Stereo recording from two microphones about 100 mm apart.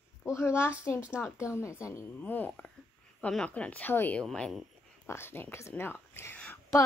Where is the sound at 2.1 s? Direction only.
15° left (ahead or behind).